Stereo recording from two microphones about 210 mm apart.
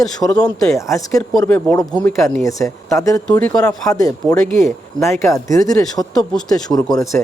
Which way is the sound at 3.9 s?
15° left (ahead or behind).